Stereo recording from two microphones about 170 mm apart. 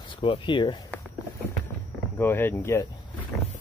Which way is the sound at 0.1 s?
30° left (ahead or behind).